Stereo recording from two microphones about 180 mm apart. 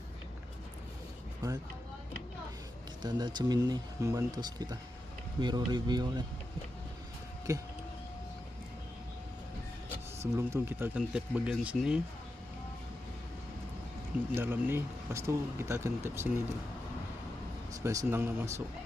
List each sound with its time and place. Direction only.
1.4 s speech: 20° right (ahead or behind)
3.0 s speech: 25° right (ahead or behind)
7.5 s speech: 15° right (ahead or behind)
10.3 s speech: 15° right (ahead or behind)
14.3 s speech: 10° right (ahead or behind)
17.8 s speech: 15° right (ahead or behind)